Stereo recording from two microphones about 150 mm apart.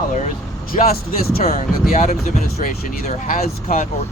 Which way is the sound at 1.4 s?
45° left (ahead or behind).